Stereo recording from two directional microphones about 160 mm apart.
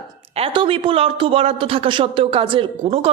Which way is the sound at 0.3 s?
35° right (ahead or behind).